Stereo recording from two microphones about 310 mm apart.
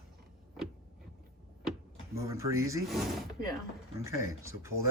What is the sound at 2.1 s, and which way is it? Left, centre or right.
Speech, centre.